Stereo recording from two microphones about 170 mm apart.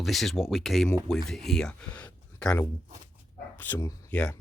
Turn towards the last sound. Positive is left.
turn(degrees=10)  # may be behind; listen again after turning